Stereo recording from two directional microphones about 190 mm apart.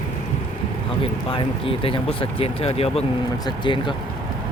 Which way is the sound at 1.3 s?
30° left (ahead or behind).